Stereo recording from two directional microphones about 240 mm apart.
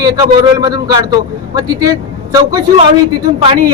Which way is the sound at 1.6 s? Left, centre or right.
Centre.